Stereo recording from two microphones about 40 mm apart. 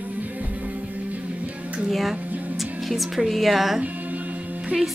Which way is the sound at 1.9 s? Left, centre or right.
Centre.